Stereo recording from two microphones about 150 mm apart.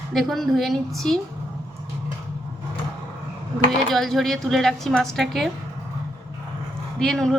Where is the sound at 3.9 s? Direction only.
Centre (ahead or behind).